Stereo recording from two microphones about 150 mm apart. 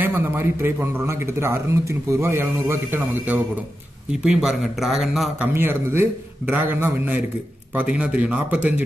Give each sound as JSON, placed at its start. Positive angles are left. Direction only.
{"t": 0.0, "sound": "a man's voice", "side_deg": -15}
{"t": 5.5, "sound": "a man's voice", "side_deg": -15}